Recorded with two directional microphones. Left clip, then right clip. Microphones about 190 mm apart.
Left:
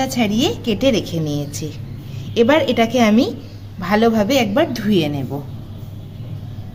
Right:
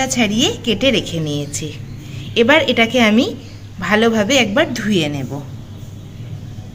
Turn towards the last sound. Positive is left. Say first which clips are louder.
# even
turn(degrees=5)  # may be behind; listen again after turning